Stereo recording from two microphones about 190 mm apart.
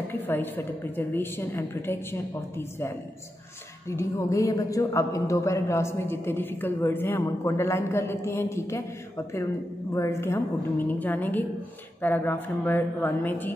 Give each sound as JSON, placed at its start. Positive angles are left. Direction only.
{"t": 0.1, "sound": "a man's voice", "side_deg": 10}
{"t": 3.9, "sound": "a man's voice", "side_deg": 15}
{"t": 9.9, "sound": "a man's voice", "side_deg": 15}